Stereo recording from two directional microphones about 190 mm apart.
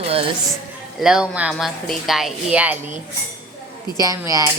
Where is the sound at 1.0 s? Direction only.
5° right (ahead or behind).